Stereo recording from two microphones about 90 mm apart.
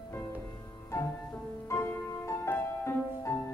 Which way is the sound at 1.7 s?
30° left (ahead or behind).